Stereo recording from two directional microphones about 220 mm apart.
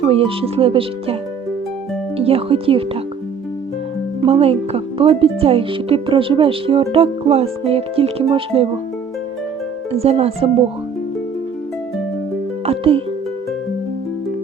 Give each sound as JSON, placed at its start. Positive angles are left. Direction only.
{"t": 0.0, "sound": "speech", "side_deg": -25}
{"t": 2.1, "sound": "speech", "side_deg": -25}
{"t": 4.2, "sound": "speech", "side_deg": -25}
{"t": 9.9, "sound": "speech", "side_deg": -25}
{"t": 12.6, "sound": "music", "side_deg": -25}